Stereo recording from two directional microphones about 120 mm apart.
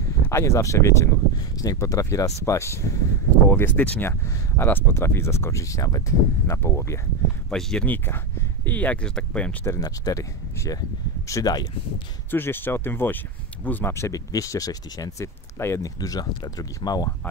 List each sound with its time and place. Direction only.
0.3 s speech: 25° left (ahead or behind)
7.4 s speech: 5° left (ahead or behind)
9.7 s speech: 30° left (ahead or behind)
12.3 s speech: 15° left (ahead or behind); by 17.1 s 35° left (ahead or behind)